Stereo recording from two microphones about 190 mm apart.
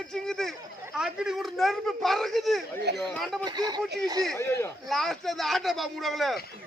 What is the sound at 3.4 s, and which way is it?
Speech, 20° right (ahead or behind).